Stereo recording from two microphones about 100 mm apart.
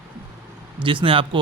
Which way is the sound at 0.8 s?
60° right (ahead or behind).